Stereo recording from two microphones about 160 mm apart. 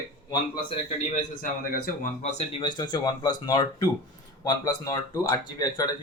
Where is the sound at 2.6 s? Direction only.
25° left (ahead or behind).